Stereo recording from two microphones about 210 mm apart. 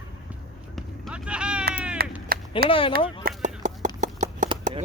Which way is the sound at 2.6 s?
25° left (ahead or behind).